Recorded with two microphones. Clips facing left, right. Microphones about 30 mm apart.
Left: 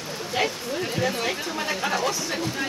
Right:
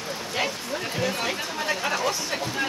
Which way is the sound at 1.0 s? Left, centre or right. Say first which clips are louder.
Even; centre.